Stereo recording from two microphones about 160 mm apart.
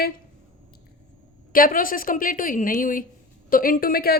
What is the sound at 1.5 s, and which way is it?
A woman's voice, 60° left (ahead or behind).